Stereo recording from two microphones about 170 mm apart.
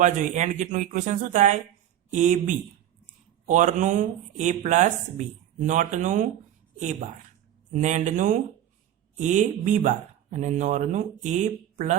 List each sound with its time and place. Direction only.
0.0 s speech: 45° right (ahead or behind)
7.7 s speech: 45° right (ahead or behind)